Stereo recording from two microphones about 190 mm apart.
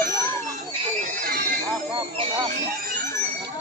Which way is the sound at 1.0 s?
45° right (ahead or behind).